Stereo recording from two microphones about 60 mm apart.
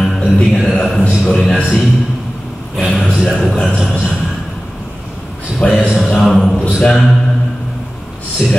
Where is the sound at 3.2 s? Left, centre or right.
Centre.